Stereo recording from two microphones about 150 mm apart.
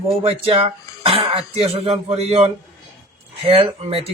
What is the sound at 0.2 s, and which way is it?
Speech, 40° right (ahead or behind).